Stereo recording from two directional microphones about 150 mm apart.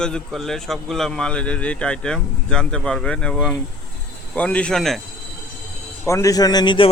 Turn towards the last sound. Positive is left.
turn(degrees=35)  # may be behind; listen again after turning